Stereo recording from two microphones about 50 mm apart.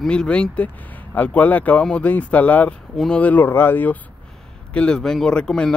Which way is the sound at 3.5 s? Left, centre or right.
Left.